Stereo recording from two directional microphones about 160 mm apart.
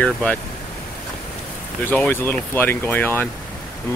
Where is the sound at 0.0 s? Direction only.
5° left (ahead or behind).